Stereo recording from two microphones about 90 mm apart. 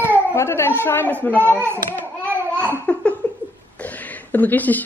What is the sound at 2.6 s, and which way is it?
Laughter, 15° left (ahead or behind).